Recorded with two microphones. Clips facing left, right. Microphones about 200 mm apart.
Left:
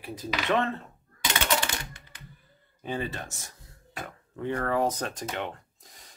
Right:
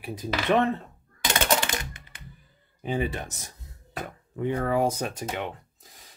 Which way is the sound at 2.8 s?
15° right (ahead or behind).